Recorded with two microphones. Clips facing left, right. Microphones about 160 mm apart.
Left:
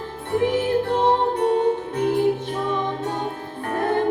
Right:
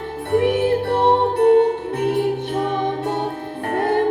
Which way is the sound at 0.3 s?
65° right (ahead or behind).